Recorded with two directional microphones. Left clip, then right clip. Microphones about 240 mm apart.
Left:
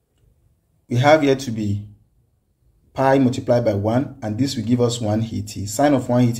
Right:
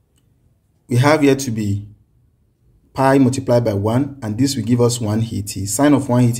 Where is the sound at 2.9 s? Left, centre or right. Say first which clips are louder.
Right 2 dB; right.